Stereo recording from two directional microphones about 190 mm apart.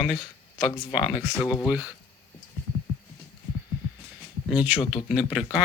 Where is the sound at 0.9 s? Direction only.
5° right (ahead or behind).